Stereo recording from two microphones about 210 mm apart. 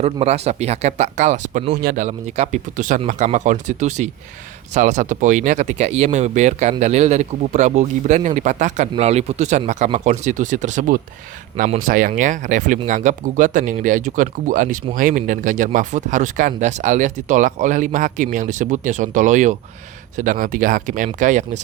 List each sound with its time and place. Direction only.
0.0 s speech: 30° right (ahead or behind)